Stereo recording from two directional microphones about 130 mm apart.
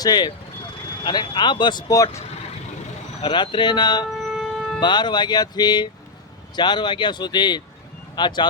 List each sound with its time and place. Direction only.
0.0 s speech: 35° left (ahead or behind)
3.2 s speech: 40° left (ahead or behind)
4.2 s siren: centre (ahead or behind)
4.8 s speech: 35° left (ahead or behind)